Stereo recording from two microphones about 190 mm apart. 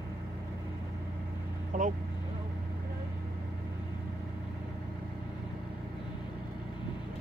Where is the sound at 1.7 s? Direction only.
45° right (ahead or behind).